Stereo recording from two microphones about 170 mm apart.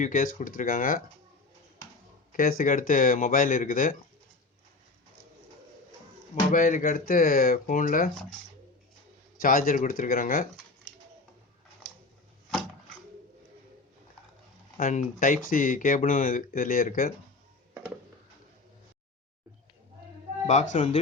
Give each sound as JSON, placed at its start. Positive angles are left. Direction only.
{"t": 0.0, "sound": "speech", "side_deg": 50}
{"t": 2.3, "sound": "speech", "side_deg": 55}
{"t": 6.5, "sound": "speech", "side_deg": 50}
{"t": 9.4, "sound": "speech", "side_deg": 55}
{"t": 14.8, "sound": "speech", "side_deg": 50}
{"t": 20.7, "sound": "speech", "side_deg": 45}